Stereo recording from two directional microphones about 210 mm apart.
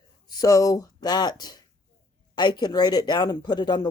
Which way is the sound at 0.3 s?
15° left (ahead or behind).